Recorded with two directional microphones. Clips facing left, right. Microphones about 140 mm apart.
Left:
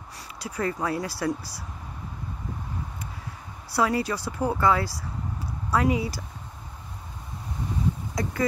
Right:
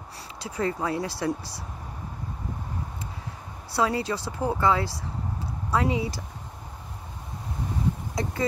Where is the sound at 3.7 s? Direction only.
25° right (ahead or behind).